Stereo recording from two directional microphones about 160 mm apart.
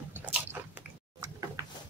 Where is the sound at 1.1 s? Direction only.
15° right (ahead or behind).